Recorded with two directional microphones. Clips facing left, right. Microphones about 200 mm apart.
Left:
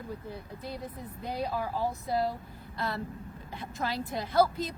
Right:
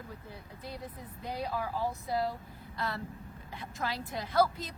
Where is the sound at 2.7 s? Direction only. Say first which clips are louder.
Left 3 dB; 30° left (ahead or behind).